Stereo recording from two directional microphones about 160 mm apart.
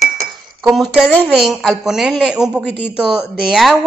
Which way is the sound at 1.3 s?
Centre (ahead or behind).